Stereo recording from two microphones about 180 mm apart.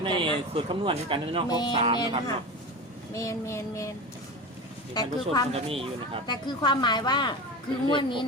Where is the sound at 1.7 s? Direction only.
30° right (ahead or behind).